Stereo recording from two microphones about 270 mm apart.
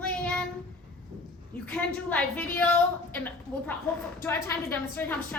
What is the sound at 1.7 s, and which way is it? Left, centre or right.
A woman's voice, centre.